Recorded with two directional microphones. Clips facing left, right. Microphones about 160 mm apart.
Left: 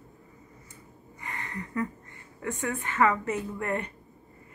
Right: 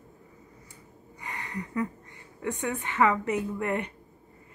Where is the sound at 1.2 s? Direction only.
15° right (ahead or behind).